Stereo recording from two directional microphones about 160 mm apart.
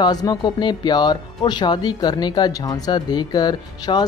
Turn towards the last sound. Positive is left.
turn(degrees=25)  # may be behind; listen again after turning